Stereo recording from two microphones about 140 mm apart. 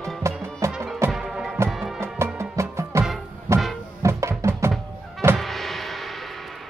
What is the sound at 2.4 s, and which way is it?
Music, 20° right (ahead or behind).